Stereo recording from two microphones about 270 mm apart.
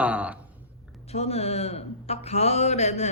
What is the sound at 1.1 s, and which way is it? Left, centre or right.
Speech, left.